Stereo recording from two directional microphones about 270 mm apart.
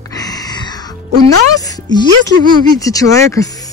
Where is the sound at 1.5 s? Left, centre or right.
Centre.